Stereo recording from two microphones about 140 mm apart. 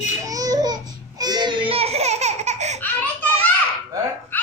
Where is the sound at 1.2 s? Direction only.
30° right (ahead or behind); by 2.8 s 55° right (ahead or behind).